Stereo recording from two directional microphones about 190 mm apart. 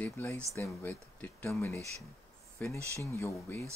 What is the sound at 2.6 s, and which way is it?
Speech, 10° left (ahead or behind).